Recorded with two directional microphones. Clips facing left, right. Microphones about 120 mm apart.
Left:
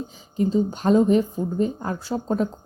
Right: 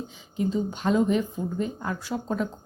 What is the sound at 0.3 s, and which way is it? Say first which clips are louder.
A woman's voice: left 5 dB; 40° left (ahead or behind).